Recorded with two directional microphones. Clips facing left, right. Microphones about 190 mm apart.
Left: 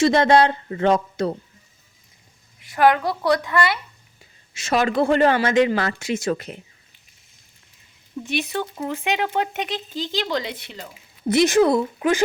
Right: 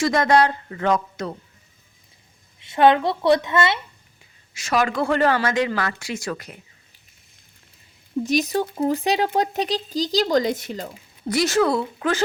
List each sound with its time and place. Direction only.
0.0 s speech: 25° left (ahead or behind)
2.6 s a woman's voice: 25° right (ahead or behind)
4.5 s speech: 25° left (ahead or behind)
8.2 s speech: 40° right (ahead or behind)
11.3 s speech: 20° left (ahead or behind)